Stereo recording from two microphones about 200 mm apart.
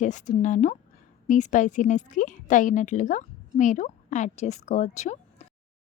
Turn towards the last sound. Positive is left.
turn(degrees=35)  # may be behind; listen again after turning